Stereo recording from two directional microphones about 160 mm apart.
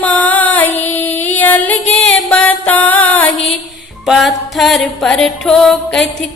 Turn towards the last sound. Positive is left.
turn(degrees=5)  # may be behind; listen again after turning